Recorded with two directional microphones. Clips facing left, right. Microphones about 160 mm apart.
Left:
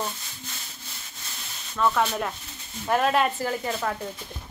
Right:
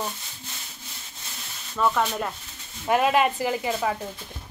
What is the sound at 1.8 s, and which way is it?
A woman's voice, centre (ahead or behind).